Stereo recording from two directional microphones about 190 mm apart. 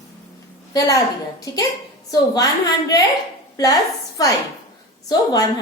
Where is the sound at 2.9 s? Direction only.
20° left (ahead or behind).